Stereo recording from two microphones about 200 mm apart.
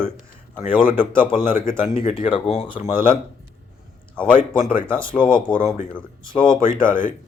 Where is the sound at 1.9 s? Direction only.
25° left (ahead or behind).